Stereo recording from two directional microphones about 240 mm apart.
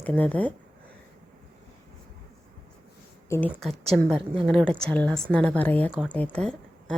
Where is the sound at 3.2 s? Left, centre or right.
Centre.